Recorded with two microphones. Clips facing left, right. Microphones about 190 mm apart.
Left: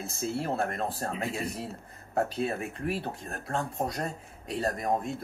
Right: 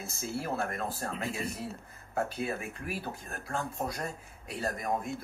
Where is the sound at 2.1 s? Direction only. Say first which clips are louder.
Left 4 dB; 30° left (ahead or behind).